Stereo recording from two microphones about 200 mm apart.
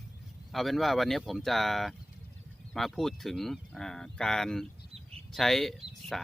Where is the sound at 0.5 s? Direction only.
Centre (ahead or behind).